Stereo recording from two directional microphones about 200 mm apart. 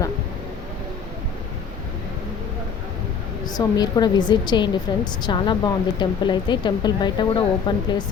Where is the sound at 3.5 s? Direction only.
20° left (ahead or behind).